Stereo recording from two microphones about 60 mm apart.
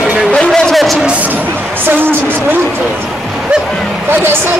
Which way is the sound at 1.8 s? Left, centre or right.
Right.